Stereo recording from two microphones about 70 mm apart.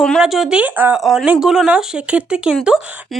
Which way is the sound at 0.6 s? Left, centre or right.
Right.